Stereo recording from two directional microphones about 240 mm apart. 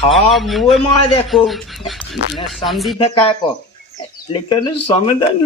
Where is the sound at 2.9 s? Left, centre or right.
Left.